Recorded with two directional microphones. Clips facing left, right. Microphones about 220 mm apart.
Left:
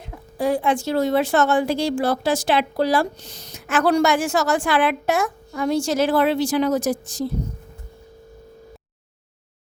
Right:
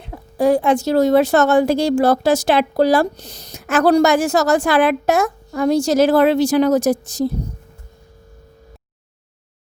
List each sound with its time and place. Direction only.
0.1 s a woman's voice: 45° right (ahead or behind)